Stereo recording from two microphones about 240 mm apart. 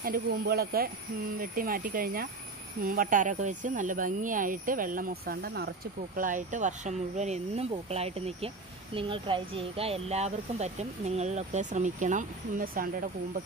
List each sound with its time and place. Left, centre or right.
0.0 s speech: right